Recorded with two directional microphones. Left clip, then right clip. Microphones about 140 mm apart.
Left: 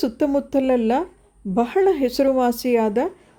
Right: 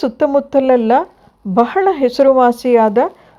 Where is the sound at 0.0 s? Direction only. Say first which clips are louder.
Right 7 dB; 15° left (ahead or behind).